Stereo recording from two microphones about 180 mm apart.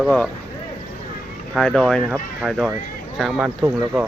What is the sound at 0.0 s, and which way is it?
Speech, 5° left (ahead or behind).